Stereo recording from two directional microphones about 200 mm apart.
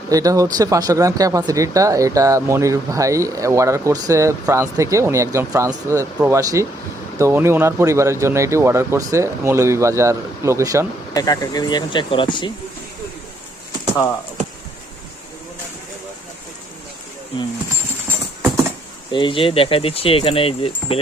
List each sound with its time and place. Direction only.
0.1 s speech: 15° right (ahead or behind)
11.1 s speech: 20° left (ahead or behind)
19.1 s speech: 25° left (ahead or behind)